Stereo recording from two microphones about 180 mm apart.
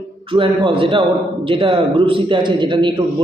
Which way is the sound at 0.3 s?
30° right (ahead or behind).